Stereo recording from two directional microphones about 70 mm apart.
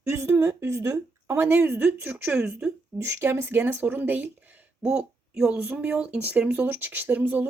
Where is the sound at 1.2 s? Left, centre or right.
Right.